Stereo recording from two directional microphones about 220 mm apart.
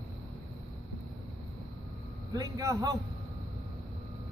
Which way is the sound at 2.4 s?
15° right (ahead or behind).